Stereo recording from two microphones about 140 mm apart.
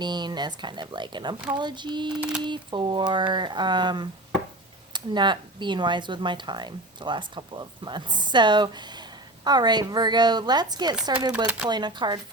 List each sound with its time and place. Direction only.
0.0 s speech: 30° right (ahead or behind)
11.4 s speech: 10° right (ahead or behind)
11.7 s speech: 30° right (ahead or behind)